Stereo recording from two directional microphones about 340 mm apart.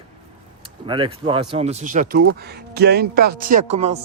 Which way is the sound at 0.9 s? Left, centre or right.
Centre.